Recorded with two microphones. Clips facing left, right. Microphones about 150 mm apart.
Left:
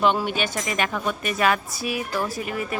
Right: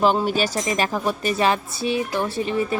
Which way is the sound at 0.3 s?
35° right (ahead or behind).